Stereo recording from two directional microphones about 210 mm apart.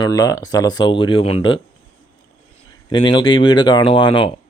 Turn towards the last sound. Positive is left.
turn(degrees=20)  # may be behind; listen again after turning